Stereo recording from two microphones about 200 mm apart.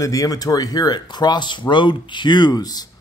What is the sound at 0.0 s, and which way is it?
A man's voice, 15° left (ahead or behind).